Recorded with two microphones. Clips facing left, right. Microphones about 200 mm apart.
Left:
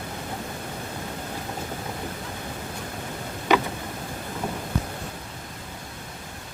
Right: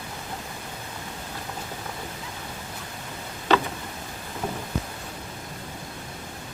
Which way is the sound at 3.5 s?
15° left (ahead or behind).